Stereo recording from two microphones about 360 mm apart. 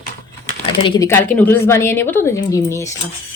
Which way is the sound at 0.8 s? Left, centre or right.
Centre.